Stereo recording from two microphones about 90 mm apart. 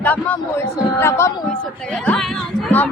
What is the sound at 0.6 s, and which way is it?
Speech, 30° left (ahead or behind).